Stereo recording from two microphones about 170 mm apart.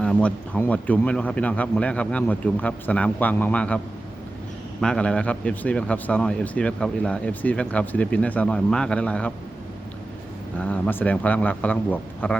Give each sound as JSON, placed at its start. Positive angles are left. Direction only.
{"t": 0.0, "sound": "speech", "side_deg": 5}
{"t": 4.8, "sound": "speech", "side_deg": 5}
{"t": 10.6, "sound": "speech", "side_deg": 10}